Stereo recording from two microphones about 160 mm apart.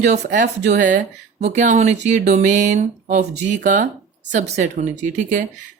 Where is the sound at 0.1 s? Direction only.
50° right (ahead or behind).